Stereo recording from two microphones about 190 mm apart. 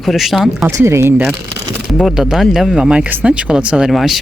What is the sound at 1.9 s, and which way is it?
Speech, centre (ahead or behind).